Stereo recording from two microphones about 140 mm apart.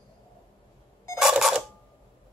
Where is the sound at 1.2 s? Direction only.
5° right (ahead or behind).